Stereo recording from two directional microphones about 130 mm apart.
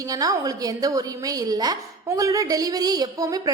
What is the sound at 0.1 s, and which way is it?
A woman's voice, 30° right (ahead or behind).